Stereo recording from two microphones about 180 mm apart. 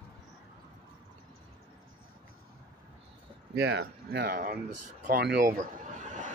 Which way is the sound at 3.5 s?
70° right (ahead or behind).